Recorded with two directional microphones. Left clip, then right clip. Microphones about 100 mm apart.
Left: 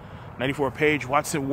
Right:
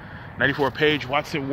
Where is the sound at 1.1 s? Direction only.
30° left (ahead or behind).